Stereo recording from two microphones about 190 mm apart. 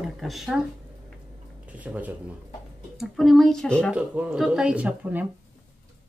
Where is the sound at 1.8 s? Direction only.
10° right (ahead or behind).